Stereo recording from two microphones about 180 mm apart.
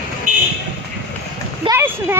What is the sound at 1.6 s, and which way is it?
Speech, 15° right (ahead or behind).